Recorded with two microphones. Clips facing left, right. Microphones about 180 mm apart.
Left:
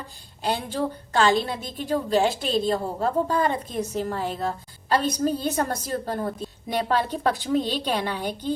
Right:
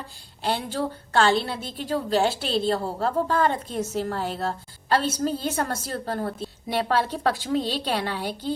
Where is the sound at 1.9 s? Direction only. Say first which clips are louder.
Left 1 dB; 15° left (ahead or behind).